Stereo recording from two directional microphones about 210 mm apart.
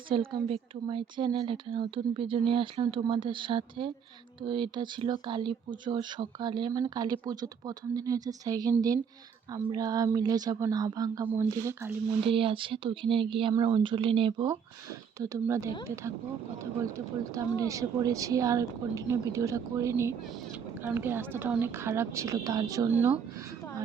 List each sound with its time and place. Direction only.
0.1 s a woman's voice: 25° right (ahead or behind)
12.2 s a woman's voice: 25° right (ahead or behind)
17.3 s a woman's voice: 15° right (ahead or behind)